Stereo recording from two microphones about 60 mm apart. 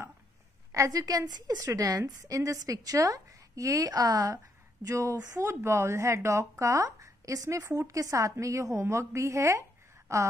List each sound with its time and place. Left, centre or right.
0.7 s a woman's voice: right
4.8 s speech: right
5.4 s speech: right